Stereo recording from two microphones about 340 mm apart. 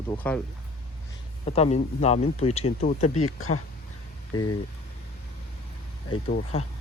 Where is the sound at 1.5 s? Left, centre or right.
Centre.